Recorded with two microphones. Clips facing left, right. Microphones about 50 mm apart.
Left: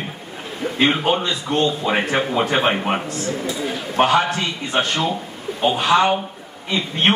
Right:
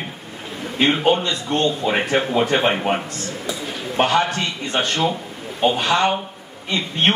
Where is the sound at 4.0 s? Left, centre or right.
Centre.